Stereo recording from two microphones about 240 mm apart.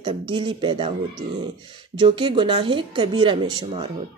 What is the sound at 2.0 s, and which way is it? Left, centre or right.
Speech, right.